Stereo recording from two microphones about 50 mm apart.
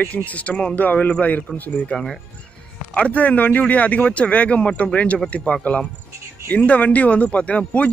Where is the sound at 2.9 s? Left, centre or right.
Left.